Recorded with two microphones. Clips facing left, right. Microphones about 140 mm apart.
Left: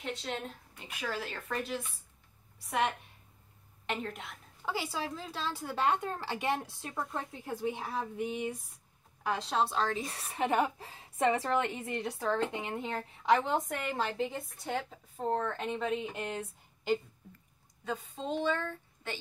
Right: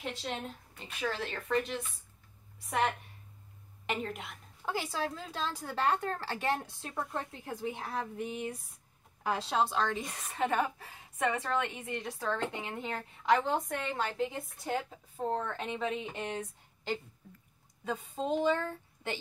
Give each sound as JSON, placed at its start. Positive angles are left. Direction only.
{"t": 0.0, "sound": "a woman's voice", "side_deg": 0}
{"t": 3.8, "sound": "a woman's voice", "side_deg": -5}
{"t": 7.0, "sound": "a woman's voice", "side_deg": 0}
{"t": 10.3, "sound": "a woman's voice", "side_deg": 20}
{"t": 12.6, "sound": "a woman's voice", "side_deg": 5}
{"t": 16.1, "sound": "speech", "side_deg": 10}
{"t": 17.8, "sound": "speech", "side_deg": -10}